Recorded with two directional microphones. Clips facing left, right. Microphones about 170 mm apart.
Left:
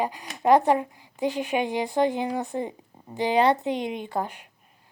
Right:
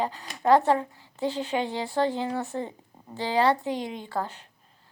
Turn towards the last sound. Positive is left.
turn(degrees=15)  # may be behind; listen again after turning